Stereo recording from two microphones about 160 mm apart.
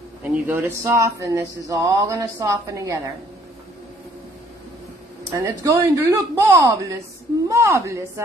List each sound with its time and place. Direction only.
0.2 s a woman's voice: 15° right (ahead or behind)
5.3 s a woman's voice: 20° right (ahead or behind)